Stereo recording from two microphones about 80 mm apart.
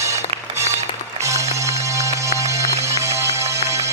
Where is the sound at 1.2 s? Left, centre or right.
Right.